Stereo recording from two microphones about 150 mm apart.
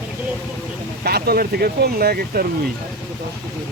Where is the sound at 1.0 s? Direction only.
90° right.